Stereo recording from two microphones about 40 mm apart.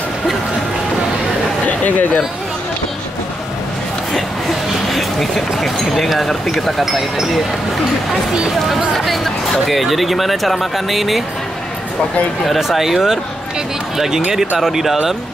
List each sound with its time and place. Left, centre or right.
1.7 s chatter: left
4.1 s a sound: centre
6.8 s speech: centre
8.5 s speech: centre
12.4 s speech: centre